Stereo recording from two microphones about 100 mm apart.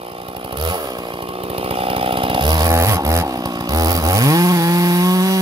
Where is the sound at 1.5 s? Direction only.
70° right (ahead or behind); by 2.7 s 45° right (ahead or behind).